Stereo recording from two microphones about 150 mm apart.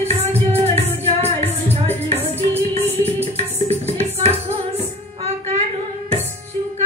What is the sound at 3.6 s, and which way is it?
Music, 45° right (ahead or behind).